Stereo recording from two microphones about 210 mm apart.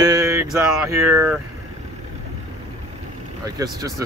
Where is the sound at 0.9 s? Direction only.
15° right (ahead or behind).